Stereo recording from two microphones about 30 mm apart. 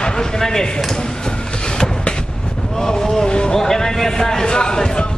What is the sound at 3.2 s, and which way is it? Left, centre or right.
Vehicle, left.